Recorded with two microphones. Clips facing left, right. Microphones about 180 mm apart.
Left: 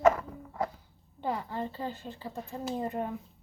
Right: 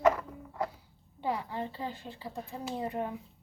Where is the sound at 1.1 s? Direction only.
10° right (ahead or behind).